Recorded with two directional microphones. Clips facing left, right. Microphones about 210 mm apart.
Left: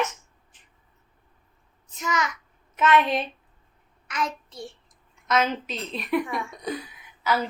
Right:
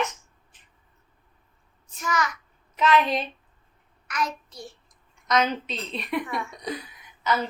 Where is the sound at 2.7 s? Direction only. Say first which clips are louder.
Left 1 dB; centre (ahead or behind).